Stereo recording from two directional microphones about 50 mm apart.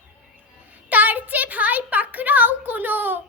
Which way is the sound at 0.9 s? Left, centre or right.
Right.